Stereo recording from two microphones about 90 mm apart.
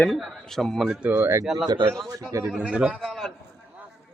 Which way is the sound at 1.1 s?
25° right (ahead or behind).